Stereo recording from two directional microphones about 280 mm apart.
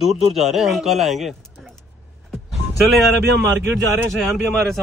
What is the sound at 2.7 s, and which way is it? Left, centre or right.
Speech, centre.